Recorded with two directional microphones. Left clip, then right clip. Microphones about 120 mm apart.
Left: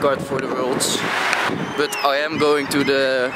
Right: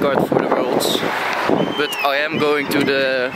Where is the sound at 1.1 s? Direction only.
50° left (ahead or behind).